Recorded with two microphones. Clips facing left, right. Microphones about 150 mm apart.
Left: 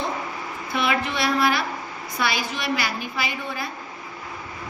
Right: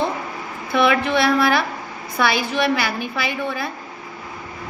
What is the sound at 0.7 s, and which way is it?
A woman's voice, 60° right (ahead or behind).